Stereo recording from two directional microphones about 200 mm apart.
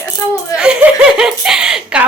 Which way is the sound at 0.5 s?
5° right (ahead or behind).